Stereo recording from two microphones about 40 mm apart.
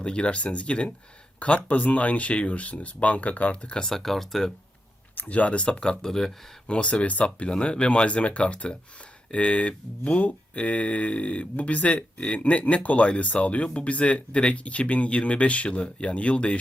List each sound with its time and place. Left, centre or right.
0.0 s speech: left
3.8 s speech: centre
5.3 s speech: left; by 6.3 s centre
6.7 s speech: left